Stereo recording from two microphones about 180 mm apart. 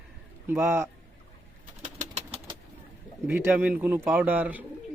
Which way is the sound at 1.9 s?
40° right (ahead or behind).